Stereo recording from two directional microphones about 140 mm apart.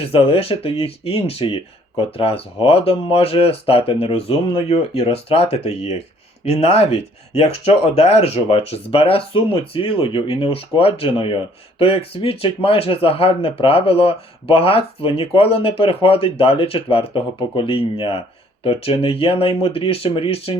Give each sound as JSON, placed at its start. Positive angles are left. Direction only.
{"t": 0.0, "sound": "speech", "side_deg": 45}